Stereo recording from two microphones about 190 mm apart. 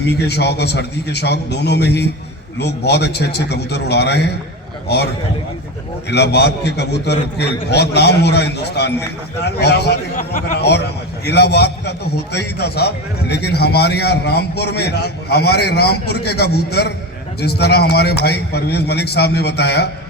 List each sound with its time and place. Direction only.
0.0 s a man's voice: 60° left (ahead or behind)
6.1 s a man's voice: 60° left (ahead or behind)